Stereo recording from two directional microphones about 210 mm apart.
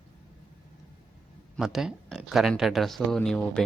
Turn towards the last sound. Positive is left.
turn(degrees=5)  # may be behind; listen again after turning